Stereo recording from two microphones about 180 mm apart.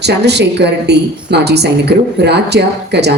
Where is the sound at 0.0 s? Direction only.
70° right (ahead or behind).